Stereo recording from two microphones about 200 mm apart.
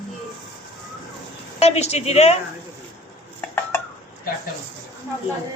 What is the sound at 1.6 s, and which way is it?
Speech, 30° left (ahead or behind).